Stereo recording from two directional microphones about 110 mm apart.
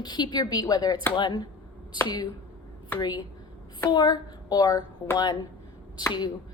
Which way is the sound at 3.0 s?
40° left (ahead or behind).